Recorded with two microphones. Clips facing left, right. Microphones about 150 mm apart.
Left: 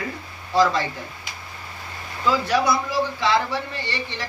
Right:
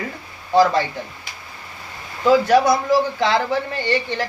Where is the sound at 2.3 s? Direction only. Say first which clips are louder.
Right 7 dB; 45° right (ahead or behind).